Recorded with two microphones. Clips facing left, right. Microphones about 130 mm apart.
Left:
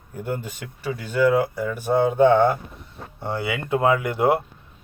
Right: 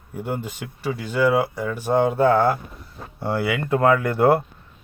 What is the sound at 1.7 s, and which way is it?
Speech, 20° left (ahead or behind).